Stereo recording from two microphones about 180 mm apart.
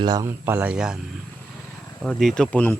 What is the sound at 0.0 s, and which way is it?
Speech, 20° right (ahead or behind).